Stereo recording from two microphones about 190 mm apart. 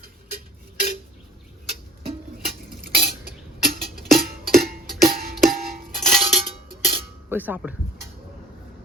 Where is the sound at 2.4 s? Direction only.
55° right (ahead or behind).